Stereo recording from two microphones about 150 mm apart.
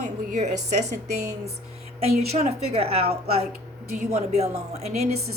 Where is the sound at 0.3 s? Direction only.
55° right (ahead or behind).